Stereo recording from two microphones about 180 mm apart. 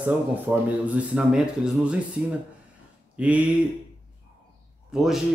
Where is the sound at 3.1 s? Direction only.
5° right (ahead or behind).